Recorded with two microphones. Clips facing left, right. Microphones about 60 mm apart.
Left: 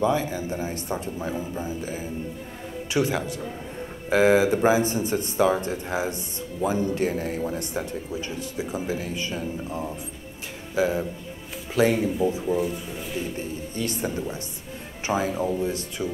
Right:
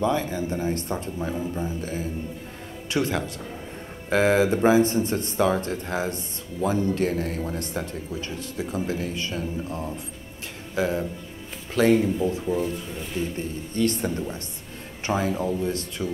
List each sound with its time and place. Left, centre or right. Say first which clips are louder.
0.0 s speech: left 1 dB; centre
13.7 s speech: right 4 dB; centre